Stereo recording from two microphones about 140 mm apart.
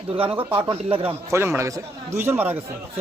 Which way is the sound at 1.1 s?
20° right (ahead or behind).